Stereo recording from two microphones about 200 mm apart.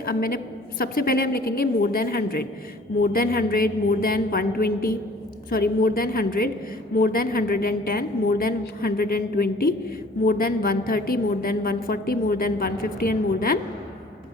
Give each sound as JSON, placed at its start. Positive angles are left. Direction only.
{"t": 0.0, "sound": "a woman's voice", "side_deg": 50}